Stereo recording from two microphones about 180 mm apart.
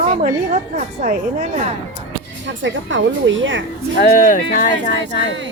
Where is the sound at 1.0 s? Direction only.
40° right (ahead or behind).